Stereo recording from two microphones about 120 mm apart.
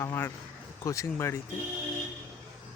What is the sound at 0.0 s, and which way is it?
Speech, 25° left (ahead or behind).